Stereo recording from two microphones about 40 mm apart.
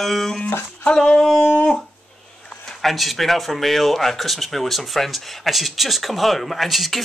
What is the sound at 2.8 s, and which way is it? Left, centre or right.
Speech, centre.